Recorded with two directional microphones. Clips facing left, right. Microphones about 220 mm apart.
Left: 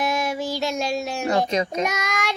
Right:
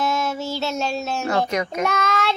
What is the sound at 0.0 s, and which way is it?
Child singing, 15° left (ahead or behind).